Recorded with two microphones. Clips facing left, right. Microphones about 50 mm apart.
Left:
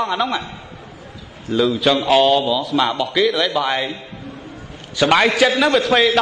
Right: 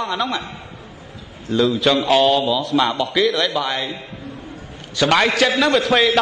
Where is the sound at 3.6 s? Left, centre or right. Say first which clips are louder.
Left 3 dB; centre.